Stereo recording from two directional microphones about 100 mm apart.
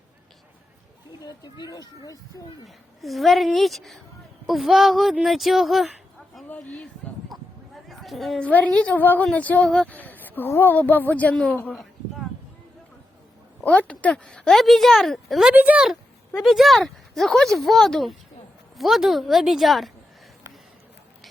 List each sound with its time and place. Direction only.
1.2 s speech: 40° left (ahead or behind)
2.6 s speech: centre (ahead or behind)
6.5 s speech: 10° left (ahead or behind)
7.0 s a sound: 10° left (ahead or behind)
7.9 s a woman's voice: centre (ahead or behind)
8.4 s speech: 15° left (ahead or behind)
13.6 s speech: 15° left (ahead or behind)
15.5 s speech: 15° right (ahead or behind)